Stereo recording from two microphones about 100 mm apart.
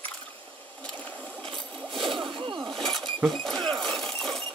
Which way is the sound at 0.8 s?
15° left (ahead or behind).